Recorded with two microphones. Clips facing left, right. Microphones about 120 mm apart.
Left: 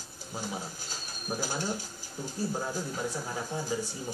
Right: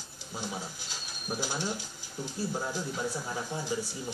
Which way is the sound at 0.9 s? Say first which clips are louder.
Left 1 dB; 45° left (ahead or behind).